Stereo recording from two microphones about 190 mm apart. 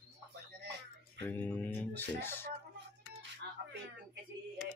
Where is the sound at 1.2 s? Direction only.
10° left (ahead or behind).